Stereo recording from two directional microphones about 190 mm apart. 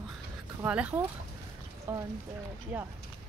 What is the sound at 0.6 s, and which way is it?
Speech, 5° right (ahead or behind).